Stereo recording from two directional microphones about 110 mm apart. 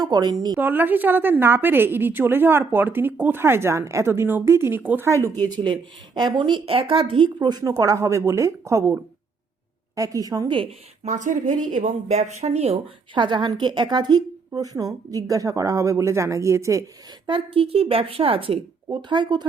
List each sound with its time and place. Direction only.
0.0 s a woman's voice: 40° right (ahead or behind)
0.6 s a woman's voice: 15° right (ahead or behind)
5.4 s a woman's voice: 40° right (ahead or behind)
7.3 s a woman's voice: 35° right (ahead or behind)
11.9 s speech: 90° right; by 12.8 s 70° right (ahead or behind)
13.1 s a woman's voice: 45° right (ahead or behind); by 16.8 s 25° right (ahead or behind)
17.2 s a woman's voice: 55° right (ahead or behind)
18.9 s a woman's voice: 45° right (ahead or behind)